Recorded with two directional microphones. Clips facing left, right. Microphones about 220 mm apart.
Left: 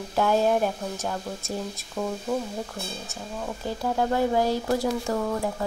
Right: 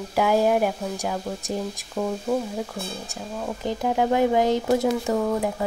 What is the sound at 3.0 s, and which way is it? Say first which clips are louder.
Speech: right 3 dB; 15° right (ahead or behind).